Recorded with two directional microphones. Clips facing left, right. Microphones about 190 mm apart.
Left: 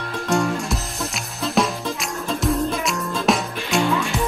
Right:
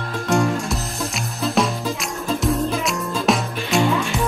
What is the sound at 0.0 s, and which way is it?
Music, centre (ahead or behind).